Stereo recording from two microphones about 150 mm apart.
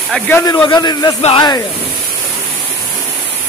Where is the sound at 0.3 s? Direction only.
20° left (ahead or behind).